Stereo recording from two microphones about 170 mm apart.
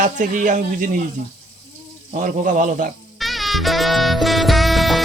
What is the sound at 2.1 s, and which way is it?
Speech, 55° right (ahead or behind).